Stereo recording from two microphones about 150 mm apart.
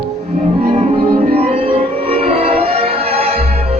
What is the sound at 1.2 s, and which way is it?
Music, 45° right (ahead or behind).